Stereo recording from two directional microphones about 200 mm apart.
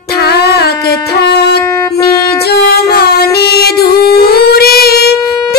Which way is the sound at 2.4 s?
50° left (ahead or behind).